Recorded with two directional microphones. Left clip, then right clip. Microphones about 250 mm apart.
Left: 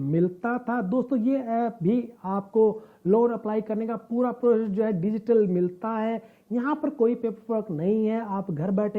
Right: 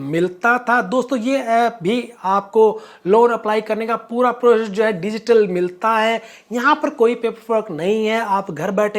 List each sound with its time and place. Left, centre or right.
0.1 s speech: centre
2.5 s speech: right
3.1 s speech: centre